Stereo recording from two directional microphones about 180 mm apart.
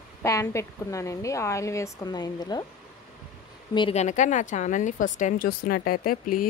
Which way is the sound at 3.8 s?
35° left (ahead or behind).